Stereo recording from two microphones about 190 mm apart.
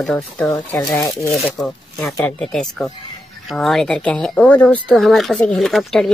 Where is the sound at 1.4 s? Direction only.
Centre (ahead or behind).